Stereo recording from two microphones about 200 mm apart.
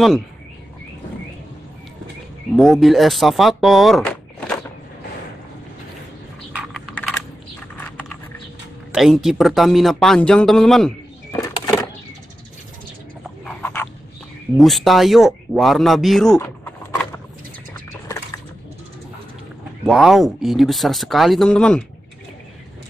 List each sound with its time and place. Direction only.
2.5 s speech: centre (ahead or behind)
6.5 s computer keyboard: centre (ahead or behind)
8.9 s speech: centre (ahead or behind)
11.4 s a sound: 15° left (ahead or behind)
13.4 s a sound: 10° left (ahead or behind)
14.6 s speech: centre (ahead or behind)
16.3 s power windows: 15° left (ahead or behind)
19.8 s speech: centre (ahead or behind)